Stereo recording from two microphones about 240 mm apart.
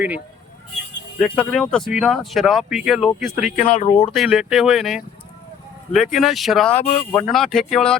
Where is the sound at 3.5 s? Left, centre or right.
Left.